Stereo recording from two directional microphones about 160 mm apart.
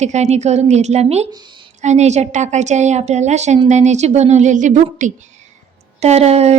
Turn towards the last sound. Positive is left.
turn(degrees=-40)  # may be behind; listen again after turning